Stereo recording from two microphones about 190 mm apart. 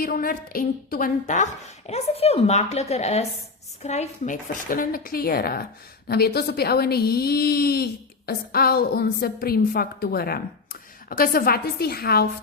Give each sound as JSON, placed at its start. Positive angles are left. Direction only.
{"t": 0.0, "sound": "a woman's voice", "side_deg": 50}